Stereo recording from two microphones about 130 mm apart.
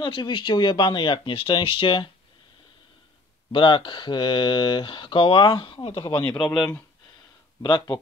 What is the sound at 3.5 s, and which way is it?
Speech, 40° left (ahead or behind).